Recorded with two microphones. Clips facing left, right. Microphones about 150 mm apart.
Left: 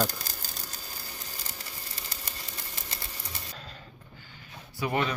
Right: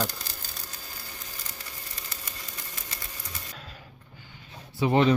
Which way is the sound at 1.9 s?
30° left (ahead or behind).